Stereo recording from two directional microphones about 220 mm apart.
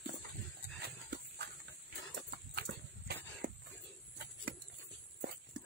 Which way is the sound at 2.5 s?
50° right (ahead or behind).